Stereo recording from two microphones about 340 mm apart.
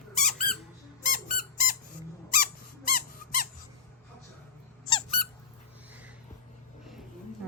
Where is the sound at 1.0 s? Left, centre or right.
Left.